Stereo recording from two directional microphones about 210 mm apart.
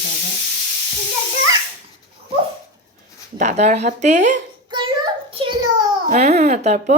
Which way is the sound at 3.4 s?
35° right (ahead or behind).